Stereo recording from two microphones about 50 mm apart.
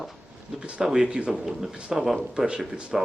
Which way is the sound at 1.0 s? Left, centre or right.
Centre.